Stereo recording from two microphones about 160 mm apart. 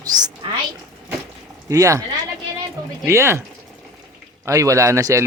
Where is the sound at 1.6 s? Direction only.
20° right (ahead or behind).